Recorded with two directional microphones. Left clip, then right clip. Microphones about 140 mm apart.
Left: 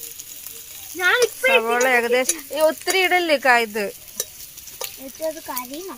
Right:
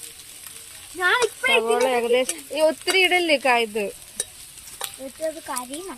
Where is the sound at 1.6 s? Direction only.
5° left (ahead or behind).